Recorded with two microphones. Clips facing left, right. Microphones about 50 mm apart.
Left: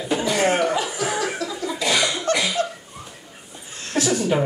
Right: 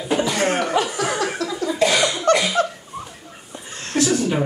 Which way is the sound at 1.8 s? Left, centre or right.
Right.